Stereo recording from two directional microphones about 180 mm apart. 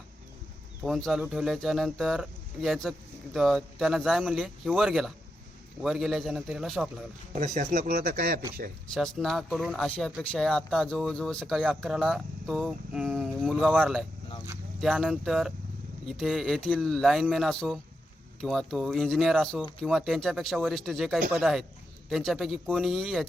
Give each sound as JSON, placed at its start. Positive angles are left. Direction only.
{"t": 0.9, "sound": "speech", "side_deg": 0}
{"t": 7.3, "sound": "speech", "side_deg": -40}
{"t": 9.0, "sound": "speech", "side_deg": 0}